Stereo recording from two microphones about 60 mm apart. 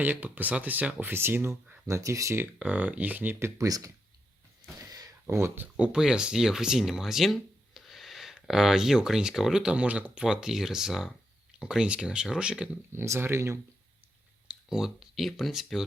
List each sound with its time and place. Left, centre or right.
0.0 s speech: right
1.1 s speech: right
1.9 s speech: right
2.6 s speech: right
3.6 s speech: right
4.6 s a sound: right
5.2 s speech: right
5.7 s speech: centre
12.9 s speech: right
14.4 s speech: centre